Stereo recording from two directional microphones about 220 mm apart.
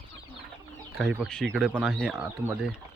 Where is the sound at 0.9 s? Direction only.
Centre (ahead or behind).